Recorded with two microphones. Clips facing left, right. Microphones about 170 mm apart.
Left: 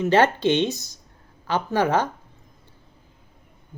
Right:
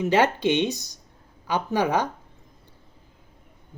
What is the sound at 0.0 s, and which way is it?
Speech, 10° right (ahead or behind).